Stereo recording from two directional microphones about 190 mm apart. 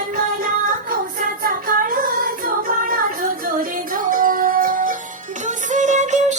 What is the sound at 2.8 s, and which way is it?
Music, 45° right (ahead or behind).